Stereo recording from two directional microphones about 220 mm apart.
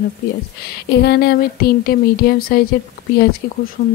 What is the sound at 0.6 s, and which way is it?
Speech, 45° left (ahead or behind).